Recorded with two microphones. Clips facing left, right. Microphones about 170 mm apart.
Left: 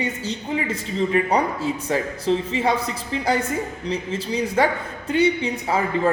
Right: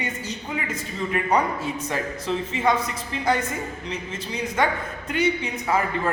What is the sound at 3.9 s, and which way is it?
A man's voice, 35° left (ahead or behind).